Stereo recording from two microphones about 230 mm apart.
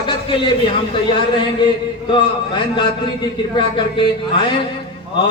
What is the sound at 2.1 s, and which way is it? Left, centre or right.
A man's voice, centre.